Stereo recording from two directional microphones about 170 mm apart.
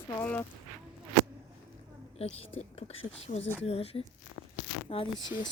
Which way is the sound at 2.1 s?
35° left (ahead or behind).